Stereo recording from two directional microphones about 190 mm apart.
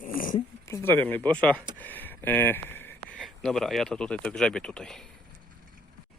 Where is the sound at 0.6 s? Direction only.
15° left (ahead or behind).